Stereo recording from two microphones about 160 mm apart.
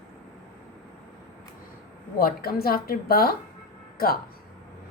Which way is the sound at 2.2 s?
70° left (ahead or behind).